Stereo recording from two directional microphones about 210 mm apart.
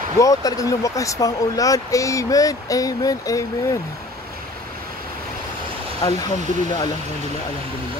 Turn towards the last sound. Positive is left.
turn(degrees=20)  # may be behind; listen again after turning